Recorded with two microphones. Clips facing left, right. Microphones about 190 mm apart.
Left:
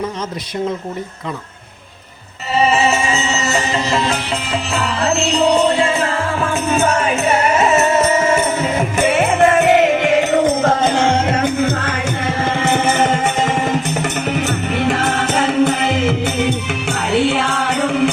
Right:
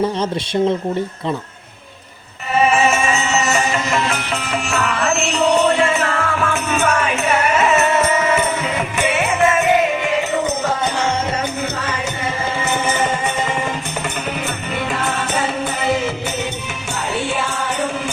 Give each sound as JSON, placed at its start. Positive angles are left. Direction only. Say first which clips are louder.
{"t": 2.8, "sound": "music", "louder": "even", "side_deg": 35}
{"t": 9.0, "sound": "music", "louder": "left 4 dB", "side_deg": 50}
{"t": 10.4, "sound": "music", "louder": "left 5 dB", "side_deg": 50}
{"t": 17.2, "sound": "music", "louder": "left 7 dB", "side_deg": 75}